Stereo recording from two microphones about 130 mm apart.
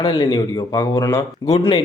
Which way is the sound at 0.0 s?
30° left (ahead or behind).